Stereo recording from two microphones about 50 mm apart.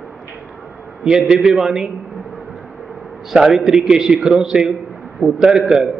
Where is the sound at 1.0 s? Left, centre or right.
Centre.